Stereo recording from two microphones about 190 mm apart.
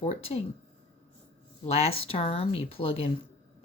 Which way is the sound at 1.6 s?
35° left (ahead or behind).